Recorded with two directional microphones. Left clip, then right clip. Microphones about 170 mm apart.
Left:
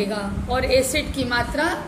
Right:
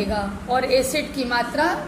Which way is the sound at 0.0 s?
10° left (ahead or behind).